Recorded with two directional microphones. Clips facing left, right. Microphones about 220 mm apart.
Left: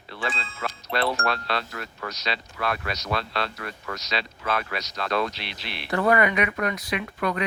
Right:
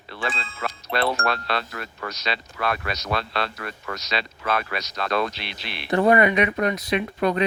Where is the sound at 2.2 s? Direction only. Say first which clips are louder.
Right 2 dB; 60° right (ahead or behind).